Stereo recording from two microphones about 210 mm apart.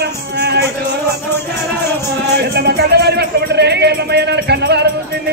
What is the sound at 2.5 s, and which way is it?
A man's voice, 50° right (ahead or behind).